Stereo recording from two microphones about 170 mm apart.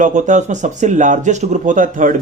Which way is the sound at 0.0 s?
45° right (ahead or behind).